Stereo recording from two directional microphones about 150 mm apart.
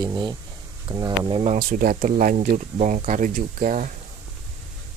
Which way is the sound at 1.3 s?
35° right (ahead or behind).